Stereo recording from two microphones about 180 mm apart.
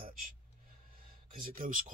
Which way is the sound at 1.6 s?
50° right (ahead or behind).